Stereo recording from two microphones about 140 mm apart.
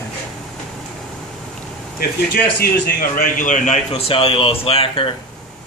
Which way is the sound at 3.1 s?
65° left (ahead or behind).